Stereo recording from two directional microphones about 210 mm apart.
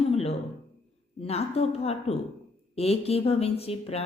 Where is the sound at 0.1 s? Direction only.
30° left (ahead or behind).